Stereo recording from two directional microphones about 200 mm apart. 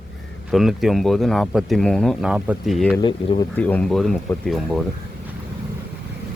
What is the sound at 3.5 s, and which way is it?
Speech, 5° left (ahead or behind).